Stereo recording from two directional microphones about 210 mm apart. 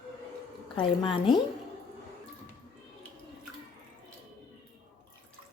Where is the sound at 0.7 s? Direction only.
25° left (ahead or behind).